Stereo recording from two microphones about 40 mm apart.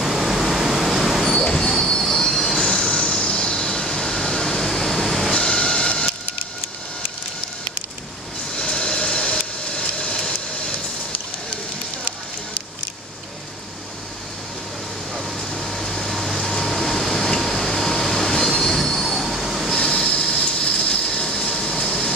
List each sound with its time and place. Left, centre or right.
0.0 s vehicle: centre
1.2 s train wheels squealing: centre
2.6 s train: left
5.3 s train: left
8.5 s a sound: left
15.1 s vehicle: centre
18.9 s train wheels squealing: centre
19.7 s train: centre